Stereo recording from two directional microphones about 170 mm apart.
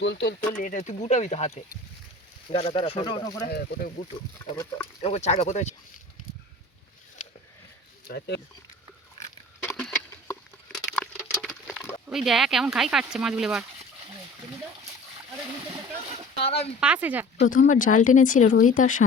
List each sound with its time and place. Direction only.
0.0 s speech: 90° left
0.5 s speech: 50° left (ahead or behind); by 3.5 s 25° left (ahead or behind)
3.5 s speech: 70° left (ahead or behind)
4.5 s speech: 20° left (ahead or behind)
5.0 s speech: 40° left (ahead or behind)
8.0 s speech: 75° left (ahead or behind)
9.6 s a sound: 5° left (ahead or behind)
10.8 s patter: 5° left (ahead or behind)
12.0 s speech: centre (ahead or behind)
16.4 s speech: 35° left (ahead or behind)
16.8 s speech: 10° right (ahead or behind)
17.5 s speech: 50° left (ahead or behind)